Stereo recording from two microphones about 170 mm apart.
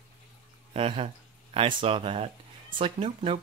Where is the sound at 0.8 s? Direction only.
35° right (ahead or behind).